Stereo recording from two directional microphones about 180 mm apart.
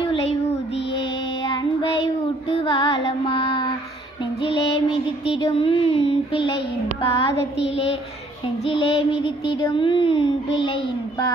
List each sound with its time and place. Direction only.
0.1 s child singing: 35° left (ahead or behind)
1.5 s child singing: 25° left (ahead or behind)
4.4 s music: 30° left (ahead or behind)
5.3 s child singing: 30° left (ahead or behind)
7.5 s a woman's voice: 80° left
8.6 s child singing: 30° left (ahead or behind)